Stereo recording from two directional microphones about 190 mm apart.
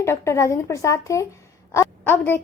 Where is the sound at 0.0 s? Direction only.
15° left (ahead or behind).